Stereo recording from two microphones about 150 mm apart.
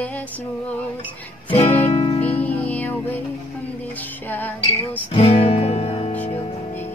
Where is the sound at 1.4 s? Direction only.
40° left (ahead or behind).